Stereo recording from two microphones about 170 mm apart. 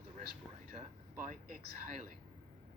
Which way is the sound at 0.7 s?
50° right (ahead or behind).